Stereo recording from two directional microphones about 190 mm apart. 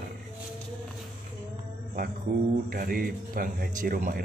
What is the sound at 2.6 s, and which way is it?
Speech, 50° right (ahead or behind).